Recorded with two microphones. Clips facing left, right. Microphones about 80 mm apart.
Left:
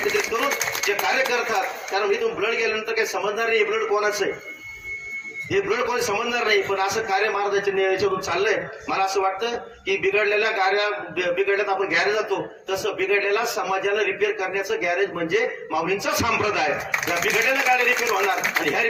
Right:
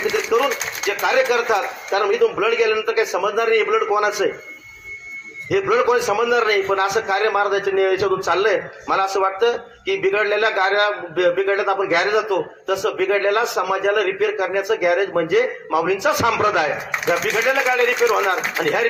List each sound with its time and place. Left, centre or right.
0.3 s a sound: right
1.0 s a man's voice: right
5.5 s a man's voice: right
7.1 s a man's voice: right
9.2 s a man's voice: right
10.0 s a man's voice: right
13.1 s a man's voice: right
17.1 s a man's voice: right